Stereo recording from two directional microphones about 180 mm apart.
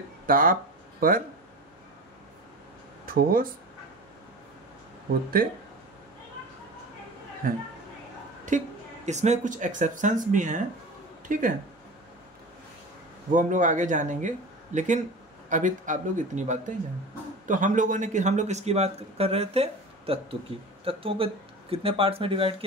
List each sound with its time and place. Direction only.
0.3 s speech: 50° right (ahead or behind)
3.1 s speech: 55° right (ahead or behind)
7.4 s speech: 50° right (ahead or behind)
13.3 s a man's voice: 45° right (ahead or behind)